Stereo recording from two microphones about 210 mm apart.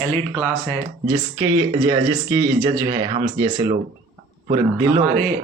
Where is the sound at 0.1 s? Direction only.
5° left (ahead or behind).